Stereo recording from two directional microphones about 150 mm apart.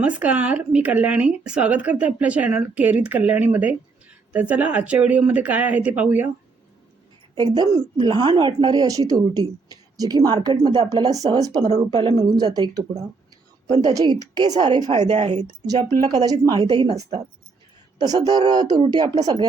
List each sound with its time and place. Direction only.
0.0 s speech: 10° right (ahead or behind)
7.3 s a woman's voice: 25° right (ahead or behind)
13.7 s a woman's voice: 45° right (ahead or behind)
13.9 s a woman's voice: 25° right (ahead or behind)
14.8 s a woman's voice: 50° right (ahead or behind)
15.6 s a woman's voice: 25° right (ahead or behind)